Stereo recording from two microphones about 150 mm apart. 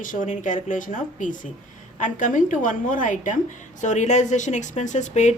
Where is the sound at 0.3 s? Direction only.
55° left (ahead or behind).